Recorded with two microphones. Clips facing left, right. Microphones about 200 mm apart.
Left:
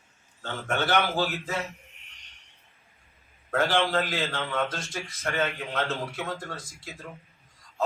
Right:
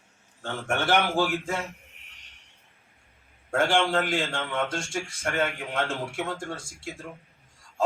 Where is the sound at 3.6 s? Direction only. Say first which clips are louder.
Right 1 dB; 30° right (ahead or behind).